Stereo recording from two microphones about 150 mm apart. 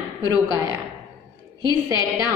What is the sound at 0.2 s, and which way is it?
Speech, 20° right (ahead or behind).